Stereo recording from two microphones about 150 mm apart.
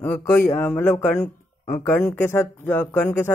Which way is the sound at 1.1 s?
55° left (ahead or behind).